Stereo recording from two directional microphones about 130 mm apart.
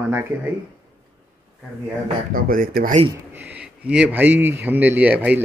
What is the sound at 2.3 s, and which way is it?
Speech, 90° right.